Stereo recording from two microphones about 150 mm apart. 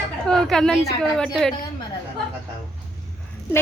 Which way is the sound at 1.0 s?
Centre (ahead or behind).